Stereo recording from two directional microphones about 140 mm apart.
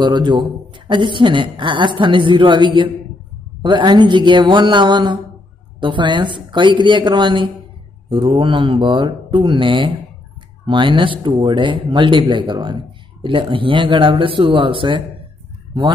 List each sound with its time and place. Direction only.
0.0 s a woman's voice: 35° right (ahead or behind)